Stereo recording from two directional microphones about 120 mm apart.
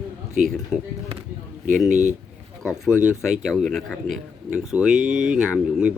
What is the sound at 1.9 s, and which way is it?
Speech, 90° right.